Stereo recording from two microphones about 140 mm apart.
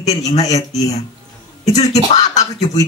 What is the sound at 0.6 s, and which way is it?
Speech, 25° left (ahead or behind).